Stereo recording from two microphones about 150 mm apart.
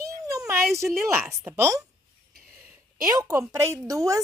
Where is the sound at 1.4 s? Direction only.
20° right (ahead or behind).